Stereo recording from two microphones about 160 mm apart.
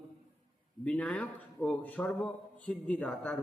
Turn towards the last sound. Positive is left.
turn(degrees=5)  # may be behind; listen again after turning